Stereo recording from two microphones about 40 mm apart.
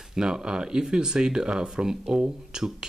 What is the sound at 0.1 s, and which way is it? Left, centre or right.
Speech, centre.